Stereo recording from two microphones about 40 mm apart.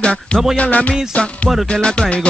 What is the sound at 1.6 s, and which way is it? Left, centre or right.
Music, left.